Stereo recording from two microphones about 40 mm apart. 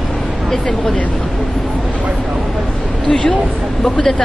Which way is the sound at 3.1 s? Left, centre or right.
Centre.